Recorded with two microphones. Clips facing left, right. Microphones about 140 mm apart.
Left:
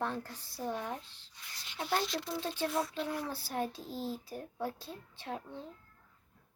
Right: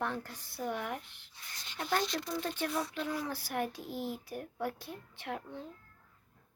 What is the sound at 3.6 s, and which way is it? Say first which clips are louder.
Speech: even; 30° left (ahead or behind).